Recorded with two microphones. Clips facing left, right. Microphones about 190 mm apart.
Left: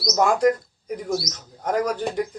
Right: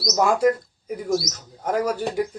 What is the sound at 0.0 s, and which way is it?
Speech, 5° right (ahead or behind).